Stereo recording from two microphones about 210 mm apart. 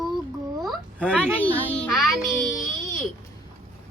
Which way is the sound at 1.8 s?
Centre (ahead or behind).